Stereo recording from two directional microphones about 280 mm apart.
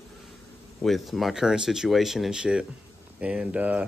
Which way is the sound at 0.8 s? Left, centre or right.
Centre.